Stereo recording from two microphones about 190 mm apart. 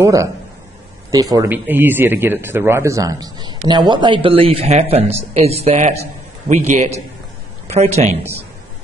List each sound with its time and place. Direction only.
0.0 s a man's voice: 15° right (ahead or behind); by 8.2 s 35° right (ahead or behind)